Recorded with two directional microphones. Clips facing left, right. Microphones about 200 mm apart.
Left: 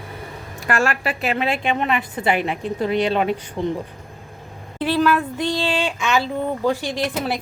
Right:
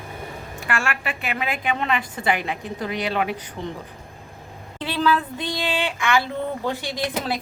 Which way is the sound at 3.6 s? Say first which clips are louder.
Left 9 dB; 60° left (ahead or behind).